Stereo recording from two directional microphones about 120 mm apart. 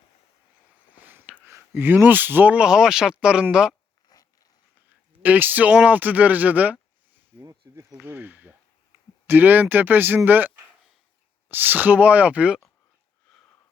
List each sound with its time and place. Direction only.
0.9 s speech: 15° right (ahead or behind)
4.1 s zipper: 30° left (ahead or behind)
5.2 s speech: 15° right (ahead or behind)
13.3 s sniff: 5° left (ahead or behind)